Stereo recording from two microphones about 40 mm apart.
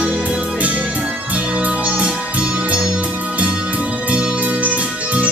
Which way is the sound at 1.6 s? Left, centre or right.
Right.